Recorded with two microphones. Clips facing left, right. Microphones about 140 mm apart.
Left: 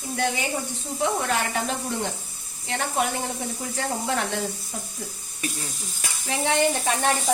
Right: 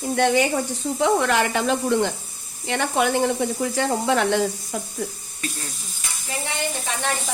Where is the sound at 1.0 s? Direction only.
90° right.